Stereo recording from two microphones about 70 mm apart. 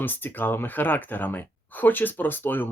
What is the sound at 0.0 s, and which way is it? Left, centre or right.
Speech, left.